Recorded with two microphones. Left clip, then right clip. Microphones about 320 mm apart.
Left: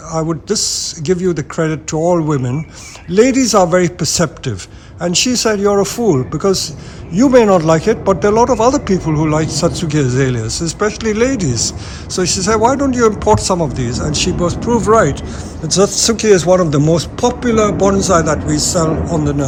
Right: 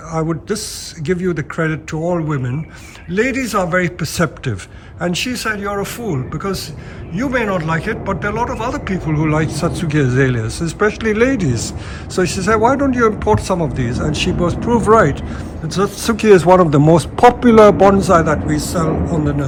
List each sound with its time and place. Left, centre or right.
0.1 s a man's voice: centre